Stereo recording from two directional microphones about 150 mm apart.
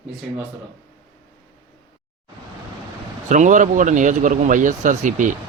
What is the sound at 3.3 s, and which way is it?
Speech, 55° right (ahead or behind).